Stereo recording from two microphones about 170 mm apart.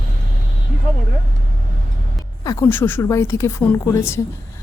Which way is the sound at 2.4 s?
20° left (ahead or behind).